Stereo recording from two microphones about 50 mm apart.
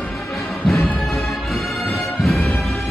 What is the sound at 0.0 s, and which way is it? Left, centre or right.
Music, centre.